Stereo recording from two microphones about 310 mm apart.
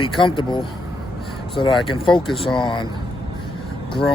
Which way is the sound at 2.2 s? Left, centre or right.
Centre.